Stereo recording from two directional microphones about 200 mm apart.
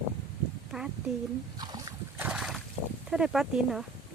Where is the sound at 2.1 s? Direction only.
5° right (ahead or behind).